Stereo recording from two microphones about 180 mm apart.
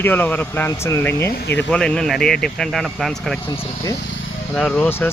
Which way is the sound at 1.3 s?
60° left (ahead or behind).